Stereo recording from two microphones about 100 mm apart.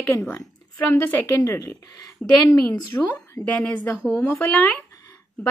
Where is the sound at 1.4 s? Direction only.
40° left (ahead or behind).